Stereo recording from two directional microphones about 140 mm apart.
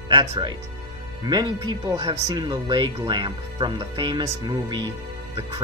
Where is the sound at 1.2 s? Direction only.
30° right (ahead or behind).